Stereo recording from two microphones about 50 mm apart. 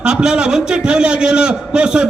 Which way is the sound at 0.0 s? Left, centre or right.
Centre.